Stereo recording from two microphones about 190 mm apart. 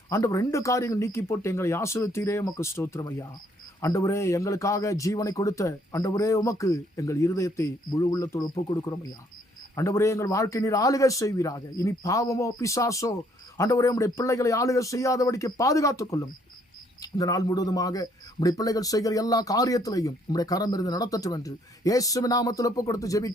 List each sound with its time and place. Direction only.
0.1 s a man's voice: 15° left (ahead or behind)